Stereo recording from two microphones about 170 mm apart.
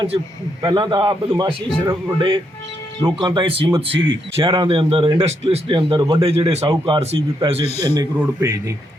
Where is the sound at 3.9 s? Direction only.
90° right.